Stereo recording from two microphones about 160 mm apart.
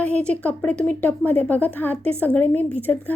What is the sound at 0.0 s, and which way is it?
A woman's voice, 10° left (ahead or behind).